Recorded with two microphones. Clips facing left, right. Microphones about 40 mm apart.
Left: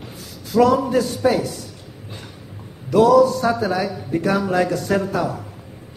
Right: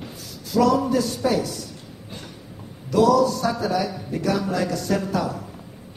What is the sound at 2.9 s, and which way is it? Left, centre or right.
A man's voice, left.